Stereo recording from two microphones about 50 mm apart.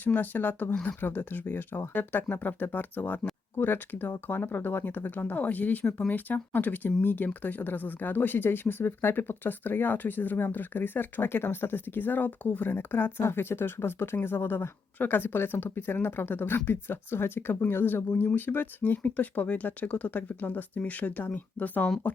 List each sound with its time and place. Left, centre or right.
0.0 s speech: left
13.2 s speech: left